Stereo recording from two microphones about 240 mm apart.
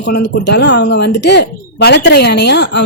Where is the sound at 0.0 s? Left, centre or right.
Left.